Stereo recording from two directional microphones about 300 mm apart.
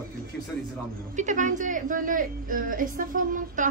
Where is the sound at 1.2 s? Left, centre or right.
Right.